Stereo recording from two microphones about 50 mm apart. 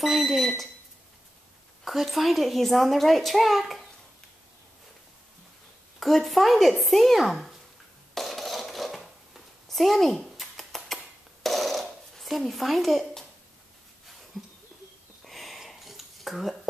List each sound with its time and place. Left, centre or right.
0.0 s a child's voice: centre
1.9 s a child's voice: centre
5.9 s a child's voice: centre
8.1 s dishes: centre
11.4 s a sound: centre
14.3 s a sound: centre